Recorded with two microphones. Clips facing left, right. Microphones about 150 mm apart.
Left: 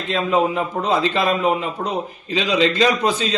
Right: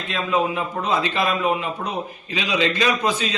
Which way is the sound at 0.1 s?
35° left (ahead or behind).